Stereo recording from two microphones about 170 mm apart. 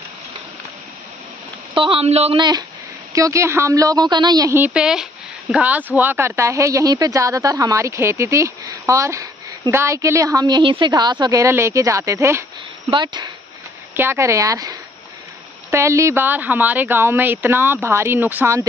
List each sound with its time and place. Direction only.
1.8 s a woman's voice: 35° right (ahead or behind)
4.6 s speech: 5° right (ahead or behind)
12.9 s a woman's voice: 25° right (ahead or behind)
13.9 s speech: 15° right (ahead or behind)